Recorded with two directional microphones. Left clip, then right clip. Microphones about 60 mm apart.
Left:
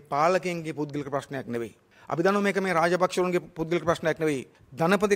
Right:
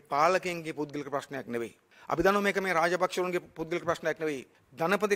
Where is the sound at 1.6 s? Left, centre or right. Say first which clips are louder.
Left 2 dB; right.